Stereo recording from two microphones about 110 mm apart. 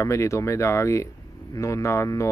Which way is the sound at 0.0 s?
25° left (ahead or behind).